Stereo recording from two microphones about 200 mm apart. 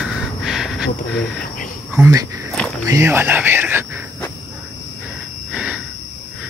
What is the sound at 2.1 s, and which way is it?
Speech, 15° right (ahead or behind).